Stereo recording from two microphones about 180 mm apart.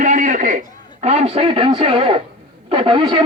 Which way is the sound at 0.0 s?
45° right (ahead or behind).